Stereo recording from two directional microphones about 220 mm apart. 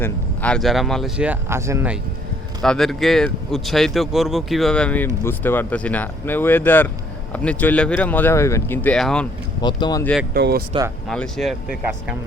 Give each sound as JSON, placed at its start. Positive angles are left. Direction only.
{"t": 0.0, "sound": "speech", "side_deg": 5}
{"t": 2.6, "sound": "speech", "side_deg": 0}
{"t": 9.6, "sound": "speech", "side_deg": 20}
{"t": 10.0, "sound": "speech", "side_deg": 5}
{"t": 10.3, "sound": "speech", "side_deg": -45}
{"t": 10.7, "sound": "speech", "side_deg": -15}
{"t": 11.1, "sound": "speech", "side_deg": 0}